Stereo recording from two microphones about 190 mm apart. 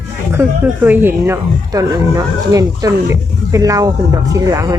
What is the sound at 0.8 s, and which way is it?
Speech, 10° right (ahead or behind).